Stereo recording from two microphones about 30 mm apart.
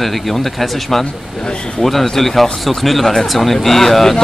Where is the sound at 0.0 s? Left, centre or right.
Centre.